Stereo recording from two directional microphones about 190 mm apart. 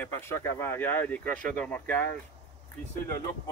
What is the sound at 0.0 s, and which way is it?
Speech, 10° left (ahead or behind).